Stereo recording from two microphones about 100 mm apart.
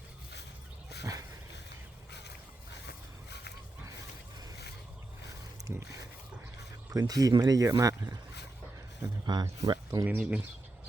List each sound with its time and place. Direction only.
5.6 s speech: 35° right (ahead or behind)
9.2 s speech: 45° right (ahead or behind)
10.1 s speech: 15° right (ahead or behind)